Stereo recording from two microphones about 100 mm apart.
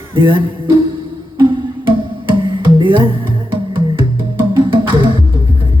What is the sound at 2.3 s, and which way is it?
Music, 55° right (ahead or behind).